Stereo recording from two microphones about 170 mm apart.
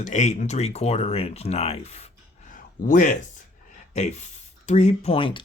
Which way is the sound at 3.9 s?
40° left (ahead or behind).